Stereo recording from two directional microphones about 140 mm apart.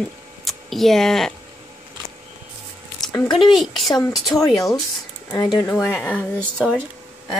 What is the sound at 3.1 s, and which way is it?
Speech, 30° left (ahead or behind).